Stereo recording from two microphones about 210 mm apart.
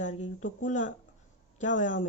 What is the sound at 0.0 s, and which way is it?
Speech, 35° left (ahead or behind).